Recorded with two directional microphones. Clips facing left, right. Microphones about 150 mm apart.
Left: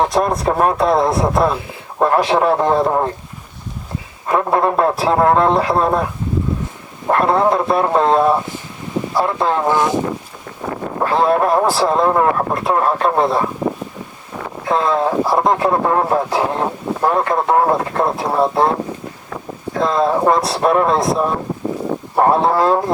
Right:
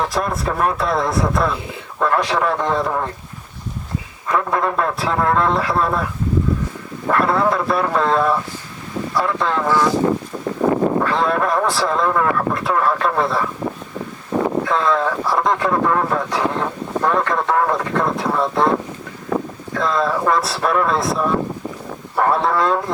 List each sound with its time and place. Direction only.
0.2 s speech: 35° left (ahead or behind)
4.3 s speech: 30° left (ahead or behind)
7.1 s speech: 25° left (ahead or behind)
9.6 s speech: 20° left (ahead or behind)
10.6 s a sound: 50° right (ahead or behind)
11.0 s speech: 30° left (ahead or behind)
14.7 s speech: 30° left (ahead or behind)
19.3 s wind: 35° right (ahead or behind)
19.8 s speech: 25° left (ahead or behind)